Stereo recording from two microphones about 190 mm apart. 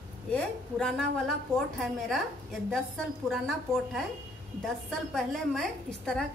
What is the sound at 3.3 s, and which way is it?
Speech, centre (ahead or behind).